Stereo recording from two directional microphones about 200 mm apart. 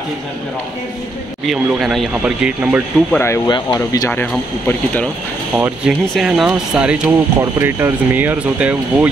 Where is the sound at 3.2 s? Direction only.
20° left (ahead or behind).